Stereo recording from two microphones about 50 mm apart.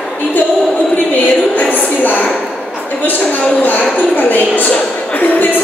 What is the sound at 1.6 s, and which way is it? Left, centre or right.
A man's voice, left.